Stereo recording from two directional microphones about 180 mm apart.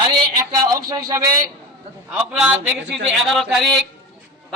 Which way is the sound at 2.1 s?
10° right (ahead or behind).